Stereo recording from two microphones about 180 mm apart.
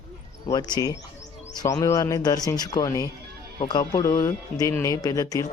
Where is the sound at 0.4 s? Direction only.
20° left (ahead or behind).